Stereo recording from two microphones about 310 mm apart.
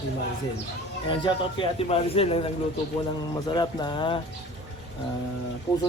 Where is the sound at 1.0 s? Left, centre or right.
Centre.